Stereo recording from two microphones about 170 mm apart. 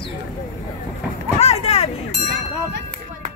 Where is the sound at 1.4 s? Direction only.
35° left (ahead or behind).